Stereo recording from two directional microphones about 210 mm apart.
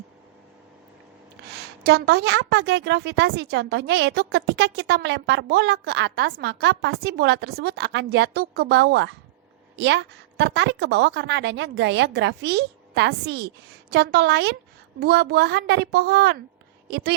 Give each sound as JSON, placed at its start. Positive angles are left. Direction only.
{"t": 1.5, "sound": "a woman's voice", "side_deg": -50}